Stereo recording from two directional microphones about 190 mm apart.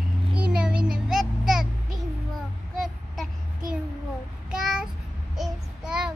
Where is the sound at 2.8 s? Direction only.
Centre (ahead or behind).